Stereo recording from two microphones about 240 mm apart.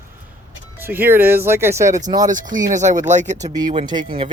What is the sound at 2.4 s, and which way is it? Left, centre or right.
Speech, right.